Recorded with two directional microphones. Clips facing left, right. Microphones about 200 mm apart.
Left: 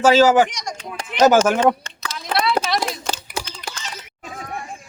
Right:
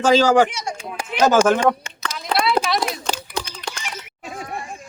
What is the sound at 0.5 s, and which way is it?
Speech, 10° right (ahead or behind).